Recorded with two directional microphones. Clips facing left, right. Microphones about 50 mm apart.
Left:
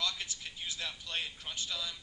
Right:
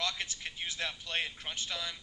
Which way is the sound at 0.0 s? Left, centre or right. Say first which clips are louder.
Right 2 dB; right.